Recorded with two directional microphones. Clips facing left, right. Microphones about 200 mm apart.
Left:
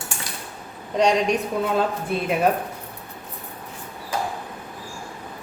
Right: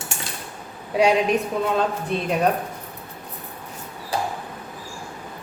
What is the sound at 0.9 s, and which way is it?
Speech, 5° right (ahead or behind).